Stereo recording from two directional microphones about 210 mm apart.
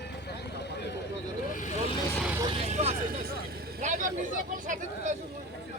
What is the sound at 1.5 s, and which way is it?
Vehicle, 35° left (ahead or behind).